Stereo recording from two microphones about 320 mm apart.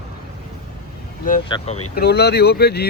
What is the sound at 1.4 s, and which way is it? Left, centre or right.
Speech, centre.